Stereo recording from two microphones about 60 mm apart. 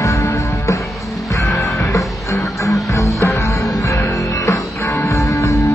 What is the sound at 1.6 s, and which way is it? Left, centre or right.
Music, left.